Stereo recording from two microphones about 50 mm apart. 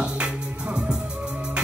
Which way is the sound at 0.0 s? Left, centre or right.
Right.